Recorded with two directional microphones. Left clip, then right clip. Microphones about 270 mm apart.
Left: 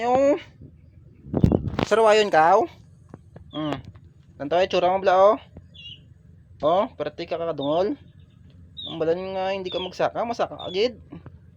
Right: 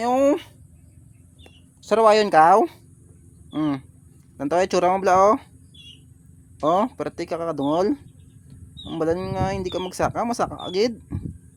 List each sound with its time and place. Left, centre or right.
0.0 s speech: right
1.9 s speech: centre
6.6 s speech: right